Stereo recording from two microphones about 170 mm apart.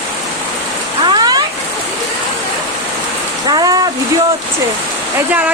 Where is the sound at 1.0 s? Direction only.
25° right (ahead or behind).